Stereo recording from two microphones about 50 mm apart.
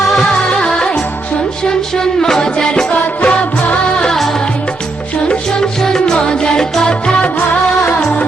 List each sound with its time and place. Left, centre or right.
0.3 s music: centre
5.3 s music: centre